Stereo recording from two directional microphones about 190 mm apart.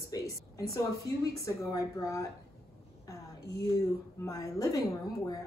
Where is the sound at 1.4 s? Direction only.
20° left (ahead or behind).